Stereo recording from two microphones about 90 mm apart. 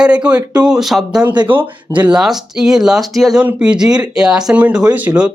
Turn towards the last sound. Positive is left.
turn(degrees=-15)  # may be behind; listen again after turning